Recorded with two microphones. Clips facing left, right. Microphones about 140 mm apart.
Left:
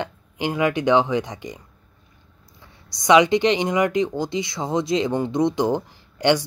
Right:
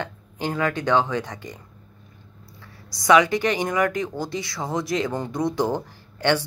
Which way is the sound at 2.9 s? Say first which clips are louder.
Left 2 dB; 20° left (ahead or behind).